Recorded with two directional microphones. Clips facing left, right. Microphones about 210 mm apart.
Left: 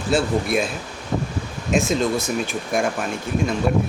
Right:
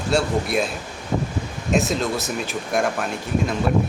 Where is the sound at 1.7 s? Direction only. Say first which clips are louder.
Left 2 dB; centre (ahead or behind).